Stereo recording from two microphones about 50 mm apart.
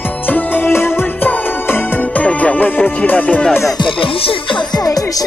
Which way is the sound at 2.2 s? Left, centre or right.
Left.